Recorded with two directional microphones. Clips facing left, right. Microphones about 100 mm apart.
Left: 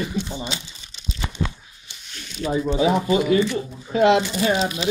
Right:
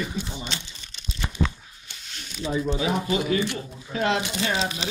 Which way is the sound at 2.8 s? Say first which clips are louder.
Left 6 dB; 30° left (ahead or behind).